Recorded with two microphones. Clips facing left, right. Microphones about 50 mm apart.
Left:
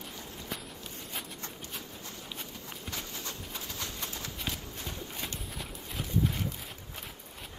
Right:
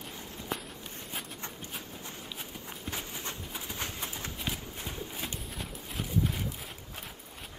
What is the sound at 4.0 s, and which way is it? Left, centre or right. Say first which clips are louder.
Clip-clop: right 1 dB; centre.